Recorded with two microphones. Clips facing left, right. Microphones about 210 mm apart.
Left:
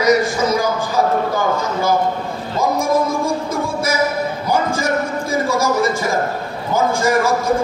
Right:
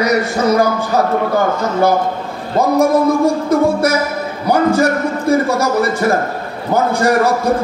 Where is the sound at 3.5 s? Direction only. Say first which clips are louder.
Right 8 dB; 65° right (ahead or behind).